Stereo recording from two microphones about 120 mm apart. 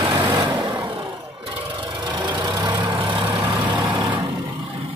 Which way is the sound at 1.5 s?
45° right (ahead or behind).